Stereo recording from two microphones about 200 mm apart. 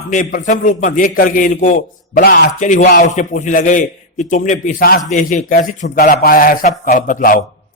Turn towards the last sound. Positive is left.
turn(degrees=45)  # may be behind; listen again after turning